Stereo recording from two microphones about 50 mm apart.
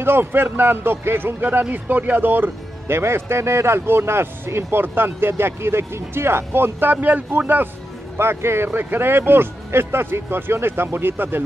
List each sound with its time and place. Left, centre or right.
0.0 s speech: right
3.0 s speech: right
8.2 s speech: right
8.6 s speech: right